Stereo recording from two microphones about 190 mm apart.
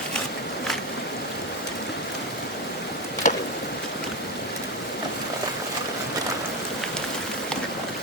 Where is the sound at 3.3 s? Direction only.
40° left (ahead or behind).